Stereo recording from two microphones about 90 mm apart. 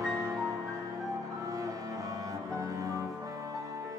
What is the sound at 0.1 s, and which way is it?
Music, 40° right (ahead or behind).